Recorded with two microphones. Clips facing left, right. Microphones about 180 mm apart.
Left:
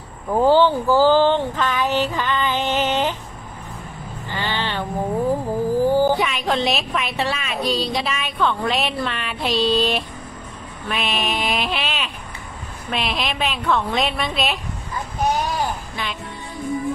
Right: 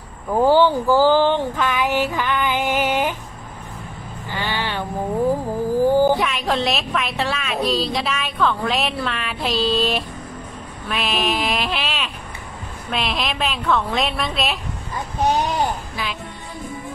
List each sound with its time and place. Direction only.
0.4 s a sound: 15° right (ahead or behind)
4.3 s vehicle: 10° right (ahead or behind)
5.8 s a sound: 15° right (ahead or behind)
6.1 s a woman's voice: centre (ahead or behind)
15.2 s vehicle: 20° right (ahead or behind)
16.0 s music: 5° right (ahead or behind)